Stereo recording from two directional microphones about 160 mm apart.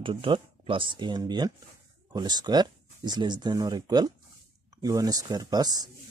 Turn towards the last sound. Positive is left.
turn(degrees=-25)  # may be behind; listen again after turning